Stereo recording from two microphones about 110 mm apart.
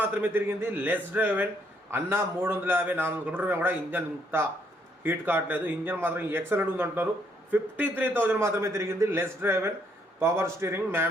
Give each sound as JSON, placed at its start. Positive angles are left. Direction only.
{"t": 0.0, "sound": "a man's voice", "side_deg": -15}